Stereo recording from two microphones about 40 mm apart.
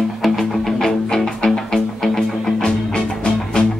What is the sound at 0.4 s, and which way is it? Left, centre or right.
Music, centre.